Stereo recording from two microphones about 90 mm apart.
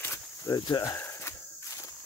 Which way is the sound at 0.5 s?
50° left (ahead or behind).